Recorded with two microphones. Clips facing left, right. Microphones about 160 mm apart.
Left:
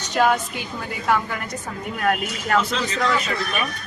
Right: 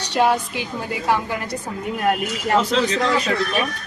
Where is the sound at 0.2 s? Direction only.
25° right (ahead or behind).